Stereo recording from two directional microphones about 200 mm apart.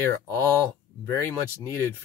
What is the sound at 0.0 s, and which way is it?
Speech, 10° left (ahead or behind).